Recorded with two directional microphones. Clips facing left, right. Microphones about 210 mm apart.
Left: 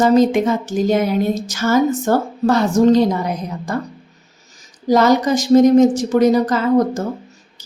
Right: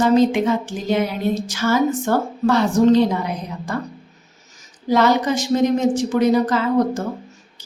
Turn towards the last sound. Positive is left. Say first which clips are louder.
# left 3 dB
turn(degrees=45)  # may be behind; listen again after turning